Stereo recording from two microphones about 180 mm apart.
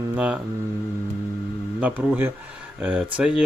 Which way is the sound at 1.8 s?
10° right (ahead or behind).